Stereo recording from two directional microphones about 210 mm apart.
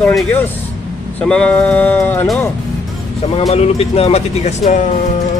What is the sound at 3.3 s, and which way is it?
Speech, 30° left (ahead or behind).